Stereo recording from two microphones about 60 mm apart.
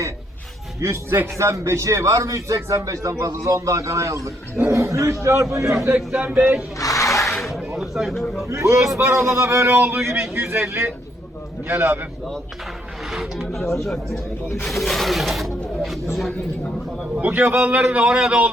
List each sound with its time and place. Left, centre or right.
0.8 s a man's voice: right
6.1 s speech: right
6.7 s a sound: left
7.3 s a sound: centre
7.8 s speech: centre
8.4 s a man's voice: right
9.7 s speech: right
13.1 s speech: centre
17.2 s speech: right